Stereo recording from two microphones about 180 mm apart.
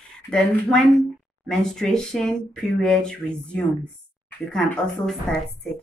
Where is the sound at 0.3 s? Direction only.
5° left (ahead or behind).